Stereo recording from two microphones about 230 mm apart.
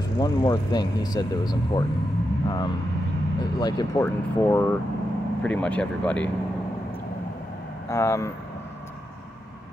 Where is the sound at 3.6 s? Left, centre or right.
Centre.